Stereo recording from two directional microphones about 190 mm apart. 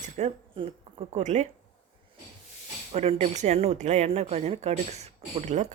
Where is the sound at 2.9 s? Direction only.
35° right (ahead or behind).